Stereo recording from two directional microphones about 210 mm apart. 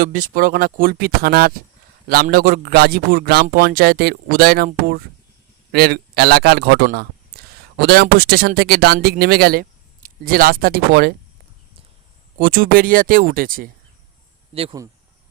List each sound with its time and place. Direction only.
0.0 s speech: 40° right (ahead or behind)
12.4 s speech: 40° right (ahead or behind)
14.5 s speech: 25° right (ahead or behind)